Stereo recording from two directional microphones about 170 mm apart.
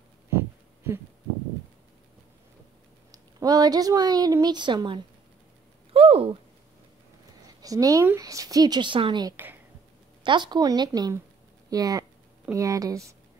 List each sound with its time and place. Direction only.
3.1 s a woman's voice: 20° right (ahead or behind)
5.9 s a sound: 35° right (ahead or behind)
7.4 s a woman's voice: 20° right (ahead or behind)